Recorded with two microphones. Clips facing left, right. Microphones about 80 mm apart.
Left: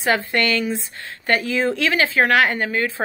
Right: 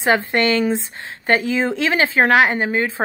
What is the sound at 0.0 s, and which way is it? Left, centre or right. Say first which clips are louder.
A woman's voice: right 3 dB; right.